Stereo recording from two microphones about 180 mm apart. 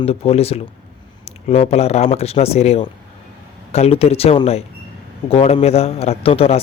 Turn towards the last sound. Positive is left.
turn(degrees=35)  # may be behind; listen again after turning